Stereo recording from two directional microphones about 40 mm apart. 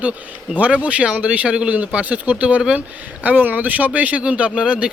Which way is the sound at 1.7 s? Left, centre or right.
Right.